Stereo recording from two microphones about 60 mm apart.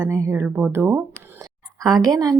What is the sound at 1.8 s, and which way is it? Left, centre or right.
Speech, right.